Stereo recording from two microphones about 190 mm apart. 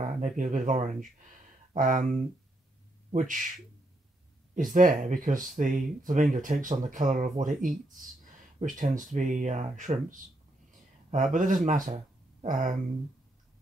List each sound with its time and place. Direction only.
0.0 s a sound: 40° right (ahead or behind)
0.4 s speech: 40° right (ahead or behind)
4.6 s speech: 45° right (ahead or behind)
11.3 s speech: 45° right (ahead or behind)